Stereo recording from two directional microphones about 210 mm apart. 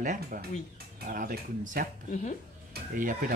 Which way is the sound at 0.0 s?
40° right (ahead or behind).